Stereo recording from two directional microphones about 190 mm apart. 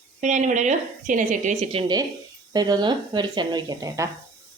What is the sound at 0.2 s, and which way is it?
A woman's voice, 40° right (ahead or behind).